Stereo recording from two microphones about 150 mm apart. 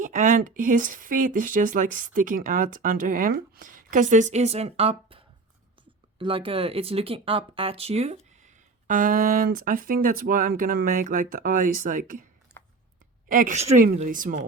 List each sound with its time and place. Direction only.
0.0 s speech: 55° right (ahead or behind)
8.9 s speech: 65° right (ahead or behind)
13.2 s a woman's voice: 65° right (ahead or behind)